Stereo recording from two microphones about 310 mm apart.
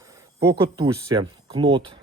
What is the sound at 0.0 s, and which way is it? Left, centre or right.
Speech, centre.